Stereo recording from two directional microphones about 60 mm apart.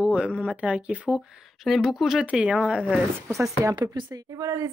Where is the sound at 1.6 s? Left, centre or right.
Centre.